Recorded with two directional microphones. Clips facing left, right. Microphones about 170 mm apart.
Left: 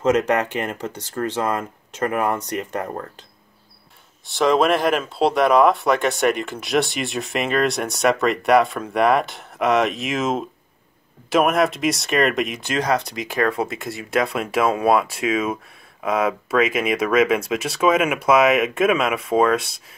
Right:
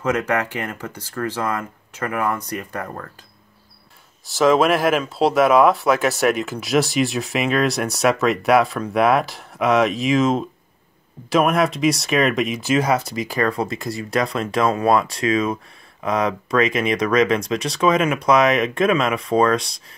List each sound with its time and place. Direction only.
0.0 s speech: 20° left (ahead or behind)
4.3 s speech: centre (ahead or behind)